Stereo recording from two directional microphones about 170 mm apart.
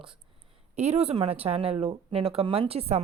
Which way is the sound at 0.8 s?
40° right (ahead or behind).